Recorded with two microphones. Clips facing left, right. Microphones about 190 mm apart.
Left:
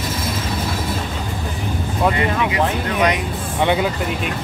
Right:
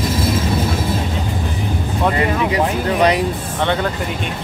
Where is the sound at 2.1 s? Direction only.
35° right (ahead or behind).